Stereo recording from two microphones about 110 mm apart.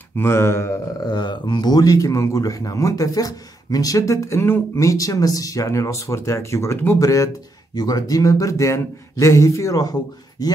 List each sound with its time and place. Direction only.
0.1 s a man's voice: 20° left (ahead or behind)
1.0 s a man's voice: 40° left (ahead or behind)